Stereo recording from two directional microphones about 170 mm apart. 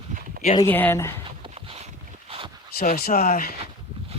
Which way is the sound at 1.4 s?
35° right (ahead or behind).